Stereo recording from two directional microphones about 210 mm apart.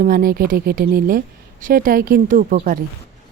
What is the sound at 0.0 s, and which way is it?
Speech, 40° right (ahead or behind).